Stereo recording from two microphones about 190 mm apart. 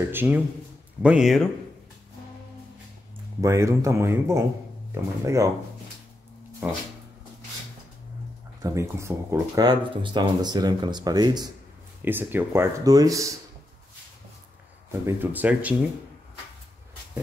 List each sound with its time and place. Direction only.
0.1 s speech: 10° right (ahead or behind)
3.3 s speech: 15° right (ahead or behind)
8.6 s speech: 15° right (ahead or behind)
12.0 s speech: 10° right (ahead or behind)
14.9 s speech: 10° right (ahead or behind)